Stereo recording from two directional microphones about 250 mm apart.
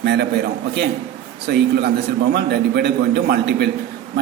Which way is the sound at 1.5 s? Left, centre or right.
Right.